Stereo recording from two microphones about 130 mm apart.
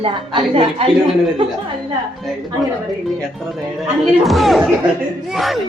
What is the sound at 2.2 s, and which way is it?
Speech, centre (ahead or behind).